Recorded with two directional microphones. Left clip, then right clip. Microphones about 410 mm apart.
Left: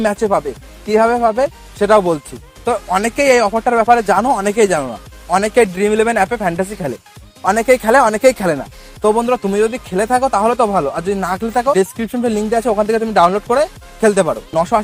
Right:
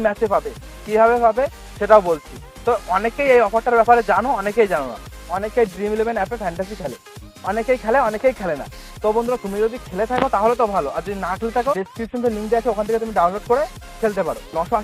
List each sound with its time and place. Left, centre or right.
0.0 s speech: left